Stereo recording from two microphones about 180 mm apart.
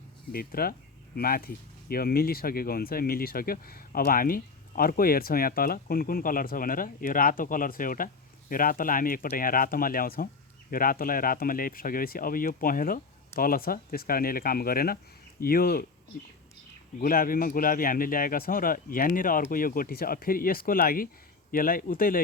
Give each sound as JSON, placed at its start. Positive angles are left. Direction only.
{"t": 0.3, "sound": "speech", "side_deg": 55}
{"t": 17.0, "sound": "speech", "side_deg": 55}